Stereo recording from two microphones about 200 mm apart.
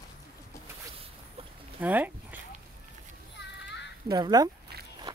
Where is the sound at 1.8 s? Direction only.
10° right (ahead or behind).